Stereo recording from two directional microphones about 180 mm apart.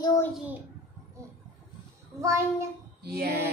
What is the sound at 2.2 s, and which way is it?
Speech, 15° right (ahead or behind).